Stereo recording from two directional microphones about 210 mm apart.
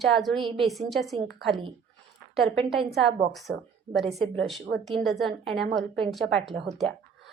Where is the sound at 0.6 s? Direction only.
Centre (ahead or behind).